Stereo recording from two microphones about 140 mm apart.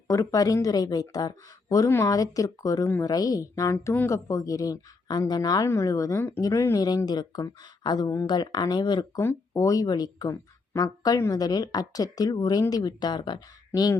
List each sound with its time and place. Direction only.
0.1 s speech: 20° left (ahead or behind)